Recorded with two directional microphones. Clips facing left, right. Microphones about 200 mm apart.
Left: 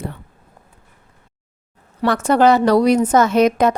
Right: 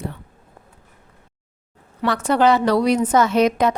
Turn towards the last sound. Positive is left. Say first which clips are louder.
# left 3 dB
turn(degrees=45)  # may be behind; listen again after turning